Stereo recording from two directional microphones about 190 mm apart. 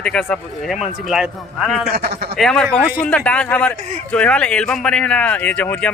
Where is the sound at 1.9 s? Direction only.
55° right (ahead or behind).